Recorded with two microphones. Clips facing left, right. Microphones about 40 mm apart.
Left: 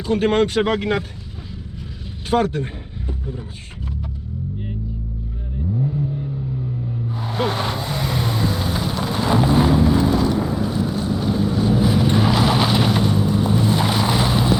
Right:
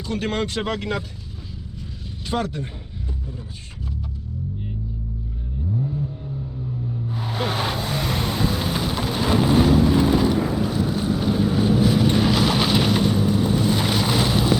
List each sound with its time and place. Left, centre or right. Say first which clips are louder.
0.0 s speech: left 7 dB; left
2.3 s speech: left 7 dB; left
7.2 s vehicle: left 3 dB; centre
10.0 s vehicle: even; centre
10.7 s vehicle: left 1 dB; centre
11.0 s boat: even; centre
11.8 s vehicle: left 1 dB; centre